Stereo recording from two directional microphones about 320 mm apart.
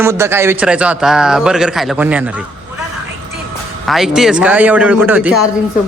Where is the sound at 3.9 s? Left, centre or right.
Centre.